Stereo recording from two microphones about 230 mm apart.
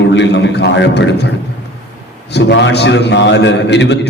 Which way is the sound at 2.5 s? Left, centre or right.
Left.